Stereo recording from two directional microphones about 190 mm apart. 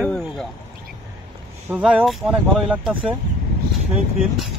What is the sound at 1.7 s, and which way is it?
Speech, 5° right (ahead or behind).